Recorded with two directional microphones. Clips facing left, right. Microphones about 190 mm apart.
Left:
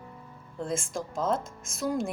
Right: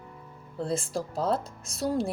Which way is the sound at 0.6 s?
35° right (ahead or behind).